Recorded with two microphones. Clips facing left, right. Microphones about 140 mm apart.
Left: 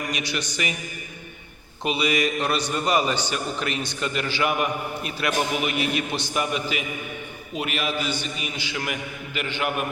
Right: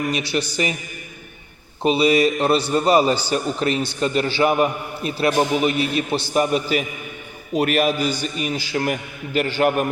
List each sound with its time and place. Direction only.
0.1 s a man's voice: 30° right (ahead or behind)
1.8 s a man's voice: 30° right (ahead or behind)